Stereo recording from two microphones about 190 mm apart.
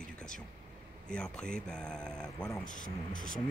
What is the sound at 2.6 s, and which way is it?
Speech, 45° left (ahead or behind).